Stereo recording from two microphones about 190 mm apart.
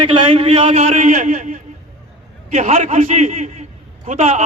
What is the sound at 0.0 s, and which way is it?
Speech, 30° right (ahead or behind).